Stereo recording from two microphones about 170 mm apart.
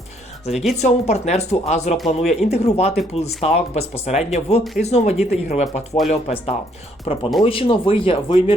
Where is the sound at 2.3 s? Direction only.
40° left (ahead or behind).